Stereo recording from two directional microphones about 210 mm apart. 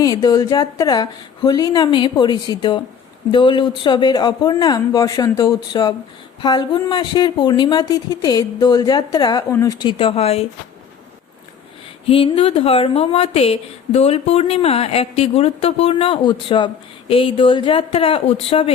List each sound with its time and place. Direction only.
0.0 s a woman's voice: 20° left (ahead or behind)
12.0 s a woman's voice: 25° left (ahead or behind)